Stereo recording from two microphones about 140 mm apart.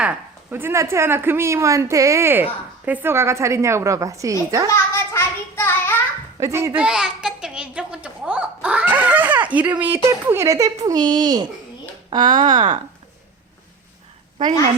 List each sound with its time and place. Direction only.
0.0 s speech: 10° right (ahead or behind)
4.7 s a sound: 20° left (ahead or behind)
6.4 s speech: 20° right (ahead or behind)
6.8 s a child's voice: 5° right (ahead or behind); by 12.8 s 35° right (ahead or behind)